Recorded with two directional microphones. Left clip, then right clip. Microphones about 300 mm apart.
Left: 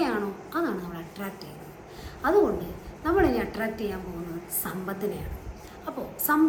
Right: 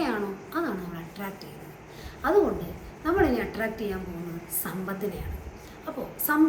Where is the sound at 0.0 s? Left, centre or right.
Centre.